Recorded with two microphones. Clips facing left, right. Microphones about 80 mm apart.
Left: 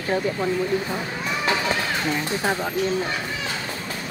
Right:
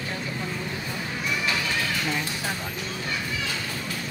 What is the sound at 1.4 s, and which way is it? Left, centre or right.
Music, left.